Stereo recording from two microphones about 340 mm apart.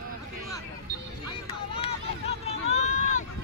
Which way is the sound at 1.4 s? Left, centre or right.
Centre.